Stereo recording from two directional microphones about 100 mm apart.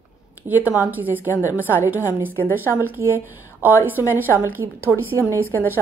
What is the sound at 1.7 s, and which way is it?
A woman's voice, 20° right (ahead or behind).